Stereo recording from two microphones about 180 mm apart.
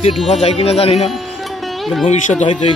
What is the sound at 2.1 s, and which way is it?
Speech, 40° left (ahead or behind).